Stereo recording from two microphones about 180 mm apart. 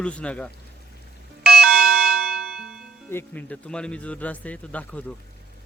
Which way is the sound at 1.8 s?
55° right (ahead or behind).